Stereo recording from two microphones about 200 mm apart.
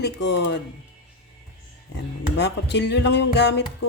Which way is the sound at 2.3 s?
60° left (ahead or behind).